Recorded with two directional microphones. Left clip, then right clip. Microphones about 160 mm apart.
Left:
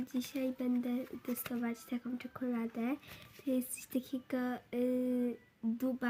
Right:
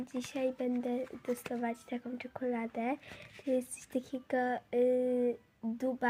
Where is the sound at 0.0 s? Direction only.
15° left (ahead or behind).